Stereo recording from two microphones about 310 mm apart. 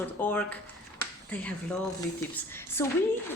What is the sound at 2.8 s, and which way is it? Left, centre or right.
Speech, centre.